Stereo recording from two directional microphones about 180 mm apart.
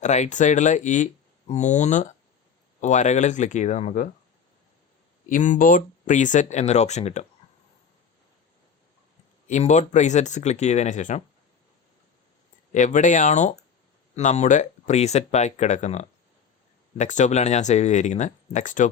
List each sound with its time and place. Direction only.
0.0 s speech: 40° left (ahead or behind)
5.3 s speech: 45° left (ahead or behind)
9.5 s speech: 40° left (ahead or behind)
12.7 s speech: 45° left (ahead or behind)